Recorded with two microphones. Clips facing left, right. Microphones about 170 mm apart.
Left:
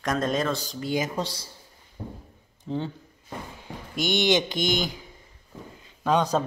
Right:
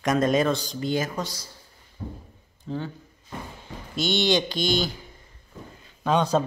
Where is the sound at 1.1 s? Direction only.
30° left (ahead or behind).